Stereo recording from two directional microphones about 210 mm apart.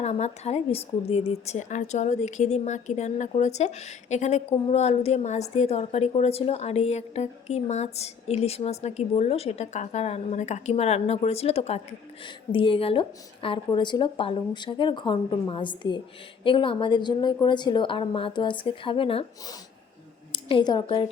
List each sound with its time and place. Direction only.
0.0 s a woman's voice: 30° left (ahead or behind)